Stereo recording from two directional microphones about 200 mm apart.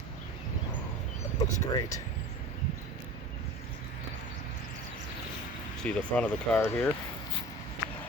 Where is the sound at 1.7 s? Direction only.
20° left (ahead or behind).